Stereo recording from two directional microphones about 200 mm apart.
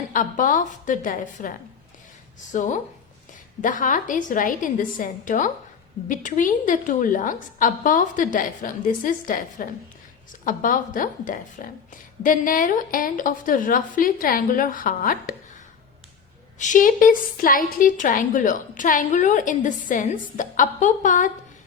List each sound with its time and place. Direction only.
0.1 s a woman's voice: 40° left (ahead or behind)
16.6 s a woman's voice: 40° left (ahead or behind)